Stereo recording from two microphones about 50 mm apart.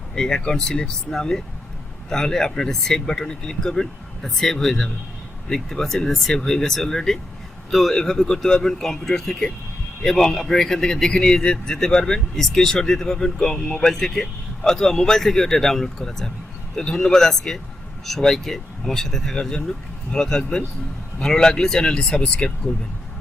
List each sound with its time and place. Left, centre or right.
0.2 s a man's voice: centre